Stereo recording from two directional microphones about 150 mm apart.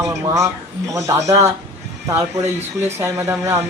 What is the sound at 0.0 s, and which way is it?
Speech, 20° right (ahead or behind).